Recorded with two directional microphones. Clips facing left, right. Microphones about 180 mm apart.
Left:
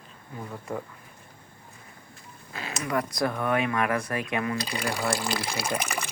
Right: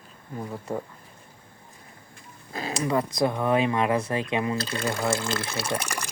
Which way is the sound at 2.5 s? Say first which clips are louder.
Right 4 dB; 35° right (ahead or behind).